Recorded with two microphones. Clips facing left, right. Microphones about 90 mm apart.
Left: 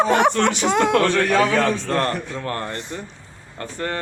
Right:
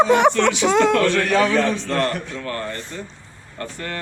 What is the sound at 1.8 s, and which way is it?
Speech, 35° left (ahead or behind).